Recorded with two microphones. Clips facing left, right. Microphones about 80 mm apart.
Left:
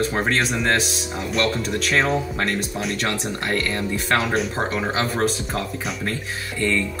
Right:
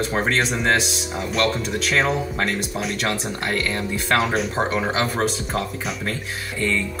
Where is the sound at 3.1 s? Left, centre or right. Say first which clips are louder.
Even; centre.